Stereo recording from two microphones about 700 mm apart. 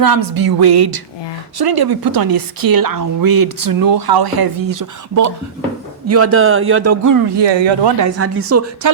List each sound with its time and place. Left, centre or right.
0.0 s speech: right